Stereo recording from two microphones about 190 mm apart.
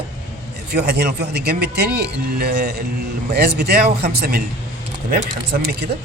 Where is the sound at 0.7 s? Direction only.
60° right (ahead or behind).